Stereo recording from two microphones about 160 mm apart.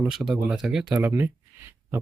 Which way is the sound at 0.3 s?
Centre (ahead or behind).